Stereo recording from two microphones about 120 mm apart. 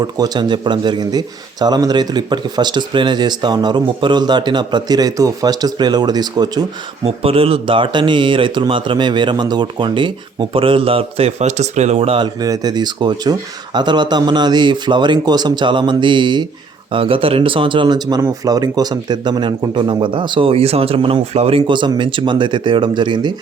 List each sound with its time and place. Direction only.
0.0 s speech: 35° right (ahead or behind)
7.0 s speech: 55° right (ahead or behind)
12.2 s speech: 35° right (ahead or behind)